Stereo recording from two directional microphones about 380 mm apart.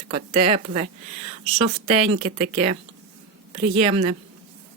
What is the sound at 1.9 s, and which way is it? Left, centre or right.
Speech, centre.